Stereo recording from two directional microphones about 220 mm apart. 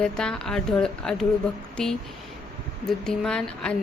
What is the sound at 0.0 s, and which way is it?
Speech, 5° left (ahead or behind).